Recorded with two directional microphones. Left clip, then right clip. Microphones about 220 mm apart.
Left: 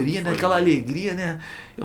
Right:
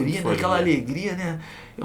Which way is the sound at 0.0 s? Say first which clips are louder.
Left 1 dB; 40° left (ahead or behind).